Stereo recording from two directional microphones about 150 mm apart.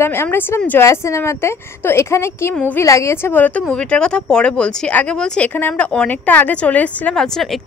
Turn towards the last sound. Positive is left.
turn(degrees=0)  # may be behind; listen again after turning